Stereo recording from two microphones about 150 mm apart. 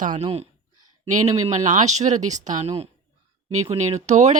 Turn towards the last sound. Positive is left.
turn(degrees=-50)  # may be behind; listen again after turning